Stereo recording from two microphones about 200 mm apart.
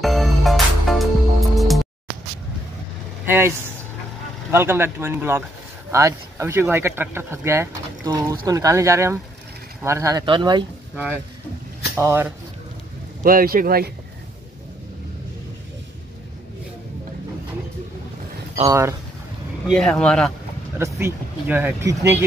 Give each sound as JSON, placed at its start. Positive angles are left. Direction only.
{"t": 0.0, "sound": "music", "side_deg": 0}
{"t": 3.3, "sound": "speech", "side_deg": -10}
{"t": 12.0, "sound": "speech", "side_deg": -10}
{"t": 13.2, "sound": "speech", "side_deg": -45}
{"t": 18.7, "sound": "speech", "side_deg": -15}
{"t": 19.7, "sound": "speech", "side_deg": 5}
{"t": 20.7, "sound": "speech", "side_deg": -10}